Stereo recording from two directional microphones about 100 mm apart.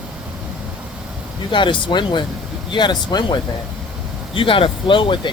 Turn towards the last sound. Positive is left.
turn(degrees=55)  # may be behind; listen again after turning